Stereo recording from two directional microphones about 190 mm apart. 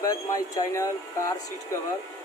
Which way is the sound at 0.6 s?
15° left (ahead or behind).